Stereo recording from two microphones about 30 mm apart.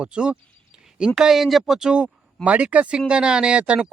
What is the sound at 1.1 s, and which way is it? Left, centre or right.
Speech, centre.